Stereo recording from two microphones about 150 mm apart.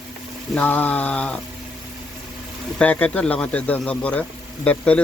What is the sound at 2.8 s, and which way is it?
Speech, 10° left (ahead or behind).